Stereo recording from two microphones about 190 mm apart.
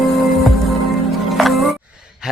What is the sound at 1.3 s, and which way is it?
Music, centre (ahead or behind).